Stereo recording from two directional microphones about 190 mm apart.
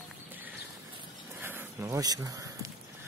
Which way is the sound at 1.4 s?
10° right (ahead or behind).